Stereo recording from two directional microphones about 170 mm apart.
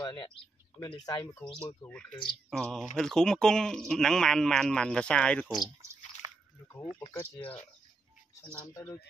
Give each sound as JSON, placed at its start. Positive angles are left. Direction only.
{"t": 0.0, "sound": "speech", "side_deg": 25}
{"t": 1.9, "sound": "speech", "side_deg": 5}
{"t": 5.8, "sound": "a sound", "side_deg": -15}
{"t": 7.3, "sound": "speech", "side_deg": 35}